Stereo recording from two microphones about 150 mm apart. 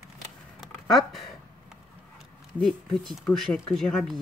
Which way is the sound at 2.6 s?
5° left (ahead or behind).